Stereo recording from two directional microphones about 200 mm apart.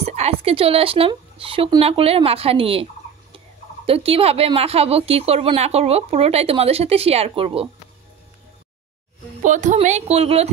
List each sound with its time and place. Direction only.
0.0 s speech: 30° right (ahead or behind)
9.4 s speech: 40° right (ahead or behind)